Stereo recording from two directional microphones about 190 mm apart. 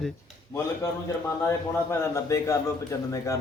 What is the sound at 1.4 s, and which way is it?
A man's voice, 15° left (ahead or behind).